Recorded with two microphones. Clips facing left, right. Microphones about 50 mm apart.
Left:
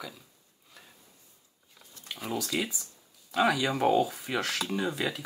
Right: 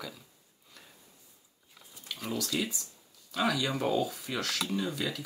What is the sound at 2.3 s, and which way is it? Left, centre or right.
Speech, left.